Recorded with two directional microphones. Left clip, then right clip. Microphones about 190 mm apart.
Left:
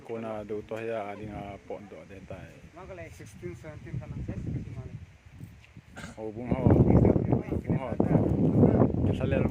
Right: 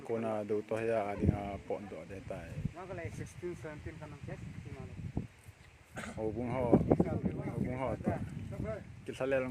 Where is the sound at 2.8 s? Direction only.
65° left (ahead or behind).